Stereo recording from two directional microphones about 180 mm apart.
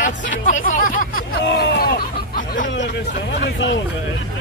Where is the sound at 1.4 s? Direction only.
60° left (ahead or behind).